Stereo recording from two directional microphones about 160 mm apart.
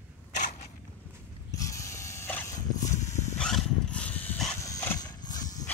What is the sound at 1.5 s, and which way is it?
Dog, 20° left (ahead or behind).